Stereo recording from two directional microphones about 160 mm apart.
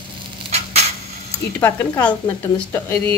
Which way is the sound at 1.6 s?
10° left (ahead or behind).